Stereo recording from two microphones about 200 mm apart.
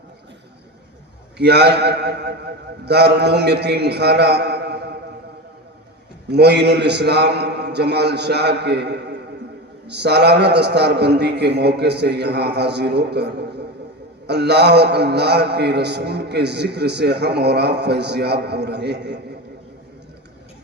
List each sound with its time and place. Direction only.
1.4 s a man's voice: 55° right (ahead or behind)
6.3 s a man's voice: 55° right (ahead or behind)